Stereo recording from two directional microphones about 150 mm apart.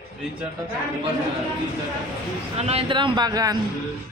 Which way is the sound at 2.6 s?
45° right (ahead or behind).